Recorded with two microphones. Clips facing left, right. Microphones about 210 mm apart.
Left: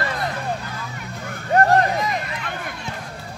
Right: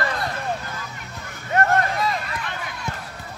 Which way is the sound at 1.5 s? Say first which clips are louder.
Left 4 dB; 35° left (ahead or behind).